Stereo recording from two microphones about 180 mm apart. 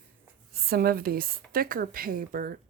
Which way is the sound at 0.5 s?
55° right (ahead or behind).